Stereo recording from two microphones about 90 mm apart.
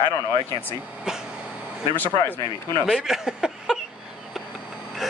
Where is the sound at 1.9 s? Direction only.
20° left (ahead or behind).